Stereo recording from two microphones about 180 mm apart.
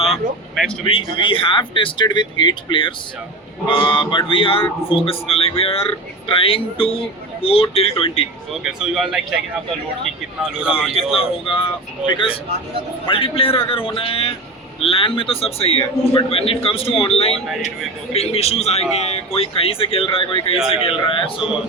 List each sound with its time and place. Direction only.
0.1 s a man's voice: centre (ahead or behind)
0.9 s speech: 30° left (ahead or behind)
8.6 s a man's voice: centre (ahead or behind)
10.7 s speech: 30° left (ahead or behind)
21.3 s a man's voice: 5° right (ahead or behind)